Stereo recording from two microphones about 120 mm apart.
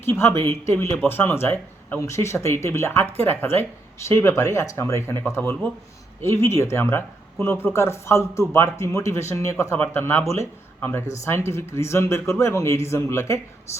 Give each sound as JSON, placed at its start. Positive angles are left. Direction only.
{"t": 0.0, "sound": "speech", "side_deg": 20}